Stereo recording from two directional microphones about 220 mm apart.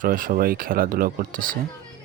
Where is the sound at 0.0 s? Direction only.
40° right (ahead or behind).